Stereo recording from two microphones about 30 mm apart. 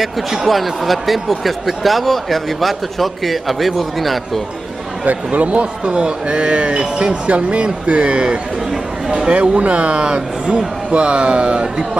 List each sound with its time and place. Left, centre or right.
0.5 s a man's voice: centre
5.0 s speech: right
5.9 s speech: right
9.3 s speech: right
9.9 s speech: right